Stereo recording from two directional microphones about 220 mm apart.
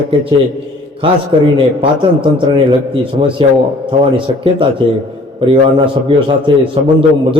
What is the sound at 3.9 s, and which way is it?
A man's voice, 25° right (ahead or behind).